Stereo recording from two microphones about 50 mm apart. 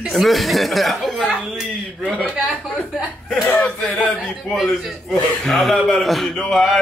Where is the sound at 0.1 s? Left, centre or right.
Centre.